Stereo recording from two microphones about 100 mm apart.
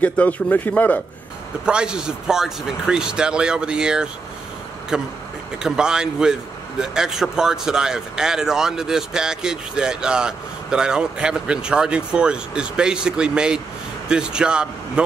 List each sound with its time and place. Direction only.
0.0 s a man's voice: 15° left (ahead or behind)
1.7 s speech: 10° right (ahead or behind)